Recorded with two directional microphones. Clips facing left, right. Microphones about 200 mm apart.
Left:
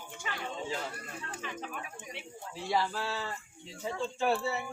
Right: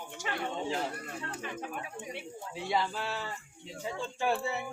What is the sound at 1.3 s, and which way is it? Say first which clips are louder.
Speech: left 1 dB; 50° right (ahead or behind).